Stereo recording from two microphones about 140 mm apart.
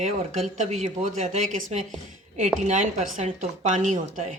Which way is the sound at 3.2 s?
55° right (ahead or behind).